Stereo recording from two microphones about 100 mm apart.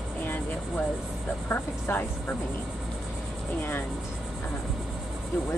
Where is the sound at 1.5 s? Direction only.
20° left (ahead or behind).